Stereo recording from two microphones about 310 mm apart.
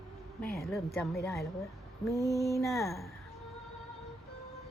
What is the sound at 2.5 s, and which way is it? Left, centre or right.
Speech, centre.